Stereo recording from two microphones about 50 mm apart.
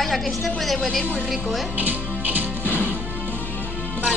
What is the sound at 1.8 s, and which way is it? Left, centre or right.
Speech, right.